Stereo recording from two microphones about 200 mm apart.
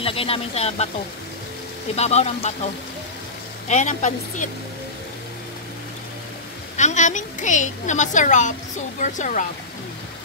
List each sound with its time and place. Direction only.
0.0 s speech: 30° left (ahead or behind)
2.0 s a woman's voice: 35° left (ahead or behind)
3.6 s a woman's voice: 35° left (ahead or behind)
6.8 s a woman's voice: 35° left (ahead or behind)